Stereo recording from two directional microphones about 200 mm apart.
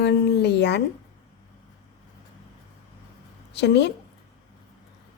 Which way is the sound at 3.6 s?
60° left (ahead or behind).